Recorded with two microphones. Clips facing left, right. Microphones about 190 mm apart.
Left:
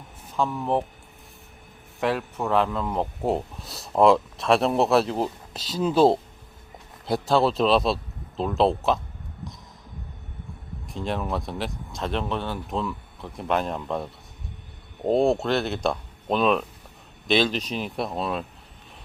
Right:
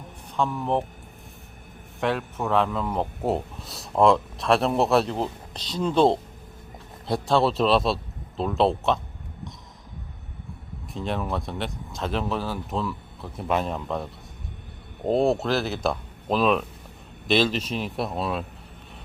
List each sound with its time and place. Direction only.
0.3 s speech: centre (ahead or behind)
2.0 s speech: centre (ahead or behind)
10.8 s speech: centre (ahead or behind)